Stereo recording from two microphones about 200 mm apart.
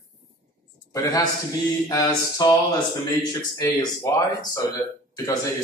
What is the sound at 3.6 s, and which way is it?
Speech, 15° left (ahead or behind).